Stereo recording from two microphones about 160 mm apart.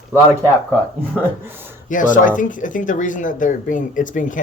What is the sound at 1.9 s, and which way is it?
Speech, 55° left (ahead or behind).